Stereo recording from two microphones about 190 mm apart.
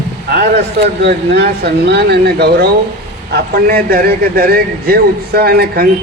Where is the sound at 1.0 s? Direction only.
60° right (ahead or behind).